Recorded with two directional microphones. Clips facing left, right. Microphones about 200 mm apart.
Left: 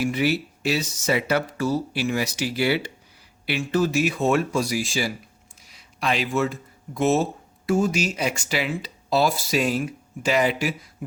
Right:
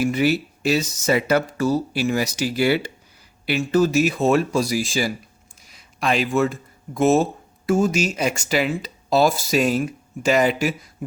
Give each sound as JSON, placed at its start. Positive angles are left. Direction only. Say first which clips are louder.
{"t": 0.0, "sound": "speech", "louder": "right 3 dB", "side_deg": -45}